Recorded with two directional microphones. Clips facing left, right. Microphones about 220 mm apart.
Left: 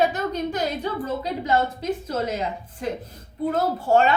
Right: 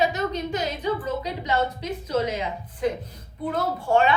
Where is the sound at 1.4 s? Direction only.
45° left (ahead or behind).